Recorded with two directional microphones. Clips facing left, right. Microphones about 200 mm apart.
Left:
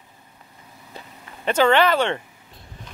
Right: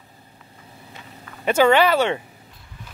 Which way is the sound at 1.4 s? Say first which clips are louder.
Right 1 dB; 10° right (ahead or behind).